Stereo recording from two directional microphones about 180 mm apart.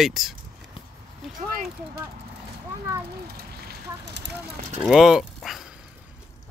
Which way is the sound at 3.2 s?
60° right (ahead or behind).